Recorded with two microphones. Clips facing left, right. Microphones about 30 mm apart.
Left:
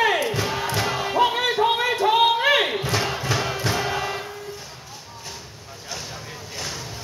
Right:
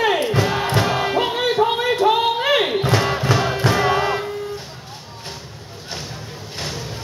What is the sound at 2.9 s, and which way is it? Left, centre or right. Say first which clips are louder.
Crowd: right 5 dB; right.